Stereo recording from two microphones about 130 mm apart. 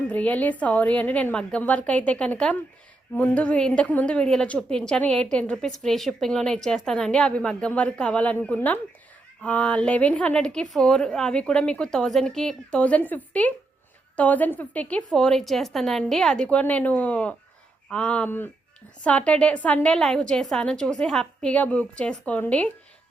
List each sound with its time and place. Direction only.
0.1 s a woman's voice: 10° left (ahead or behind)